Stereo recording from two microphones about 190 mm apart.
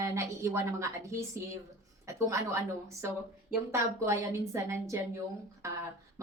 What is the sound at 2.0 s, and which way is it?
Speech, 15° right (ahead or behind).